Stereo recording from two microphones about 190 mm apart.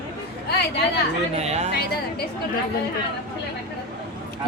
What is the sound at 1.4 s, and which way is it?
Speech, 35° right (ahead or behind).